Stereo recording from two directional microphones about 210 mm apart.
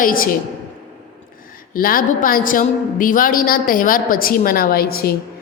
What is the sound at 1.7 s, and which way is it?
A woman's voice, 40° left (ahead or behind).